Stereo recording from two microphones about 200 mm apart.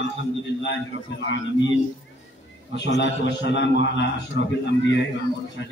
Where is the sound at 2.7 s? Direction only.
60° left (ahead or behind).